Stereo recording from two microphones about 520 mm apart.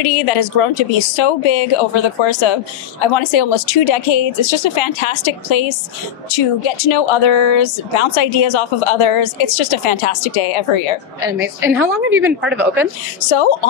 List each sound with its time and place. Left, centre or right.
0.0 s speech: left
2.2 s speech: left
11.2 s a woman's voice: centre
13.2 s speech: left